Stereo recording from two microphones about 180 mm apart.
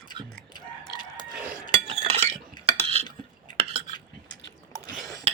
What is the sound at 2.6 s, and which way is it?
Cutlery, 35° right (ahead or behind).